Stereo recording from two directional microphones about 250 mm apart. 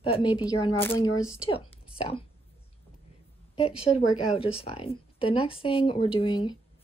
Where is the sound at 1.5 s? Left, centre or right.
Left.